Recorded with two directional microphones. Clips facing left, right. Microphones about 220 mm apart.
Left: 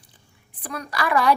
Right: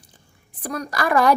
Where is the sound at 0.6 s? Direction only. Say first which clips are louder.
Right 3 dB; 40° right (ahead or behind).